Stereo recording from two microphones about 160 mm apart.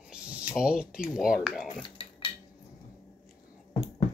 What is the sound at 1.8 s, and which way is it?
Dishes, 30° left (ahead or behind).